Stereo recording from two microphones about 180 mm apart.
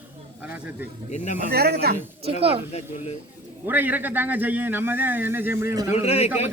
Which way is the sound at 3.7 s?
10° right (ahead or behind).